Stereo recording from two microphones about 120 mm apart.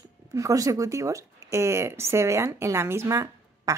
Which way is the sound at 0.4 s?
30° right (ahead or behind).